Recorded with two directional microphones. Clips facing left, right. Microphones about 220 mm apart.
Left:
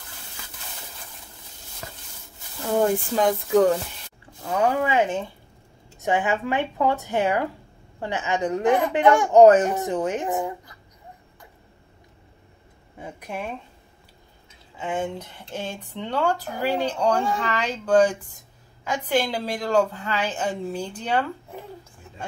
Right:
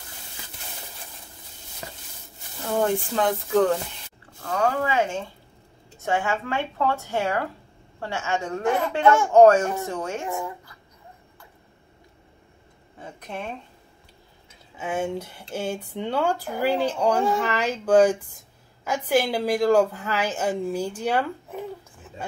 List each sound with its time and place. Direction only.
1.8 s a sound: 15° right (ahead or behind)
3.2 s speech: 10° left (ahead or behind)
13.0 s speech: 10° left (ahead or behind)
14.8 s speech: 5° right (ahead or behind)